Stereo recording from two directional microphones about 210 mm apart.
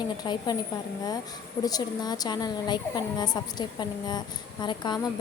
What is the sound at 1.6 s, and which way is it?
A woman's voice, 20° left (ahead or behind).